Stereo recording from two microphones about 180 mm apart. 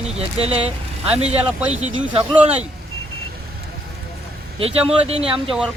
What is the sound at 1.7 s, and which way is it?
Speech, 35° right (ahead or behind).